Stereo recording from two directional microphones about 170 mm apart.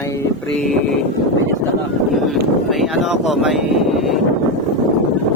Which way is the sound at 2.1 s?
Centre (ahead or behind).